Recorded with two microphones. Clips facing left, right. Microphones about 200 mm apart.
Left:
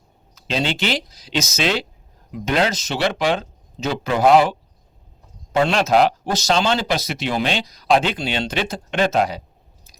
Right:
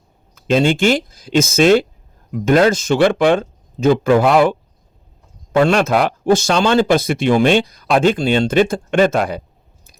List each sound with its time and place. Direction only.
0.3 s speech: 50° right (ahead or behind)